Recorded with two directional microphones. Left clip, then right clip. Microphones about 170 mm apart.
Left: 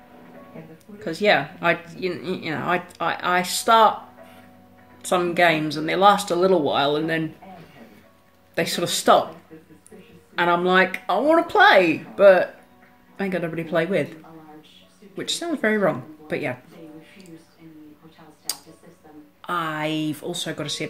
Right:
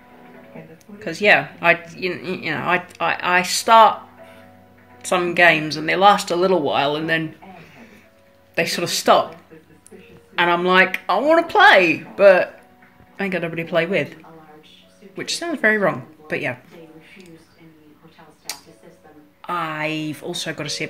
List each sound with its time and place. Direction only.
0.9 s speech: 10° left (ahead or behind)
5.0 s speech: 10° left (ahead or behind)
8.5 s speech: 10° left (ahead or behind)
10.3 s speech: 10° left (ahead or behind)
15.1 s speech: 10° left (ahead or behind)
19.4 s speech: 15° left (ahead or behind)
19.8 s speech: 65° right (ahead or behind)
20.2 s speech: 10° left (ahead or behind)